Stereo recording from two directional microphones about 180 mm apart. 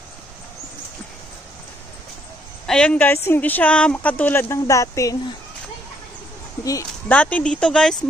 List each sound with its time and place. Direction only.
2.6 s speech: 5° left (ahead or behind)
6.6 s speech: 20° left (ahead or behind)
7.2 s speech: 5° left (ahead or behind)